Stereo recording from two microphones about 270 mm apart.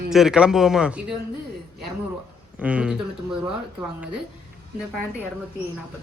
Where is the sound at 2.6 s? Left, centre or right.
Centre.